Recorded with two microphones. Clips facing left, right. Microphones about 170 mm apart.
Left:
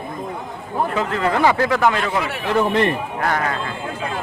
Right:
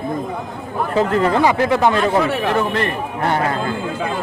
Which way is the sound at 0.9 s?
35° right (ahead or behind).